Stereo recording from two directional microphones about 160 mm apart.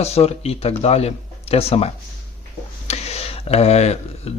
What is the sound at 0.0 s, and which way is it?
Speech, 40° left (ahead or behind).